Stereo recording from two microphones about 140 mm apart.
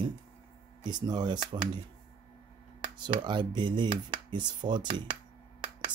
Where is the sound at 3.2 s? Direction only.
35° right (ahead or behind).